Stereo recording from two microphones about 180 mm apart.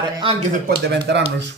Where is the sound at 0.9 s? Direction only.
70° right (ahead or behind).